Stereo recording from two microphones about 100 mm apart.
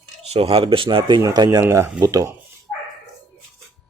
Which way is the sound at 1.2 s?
40° right (ahead or behind).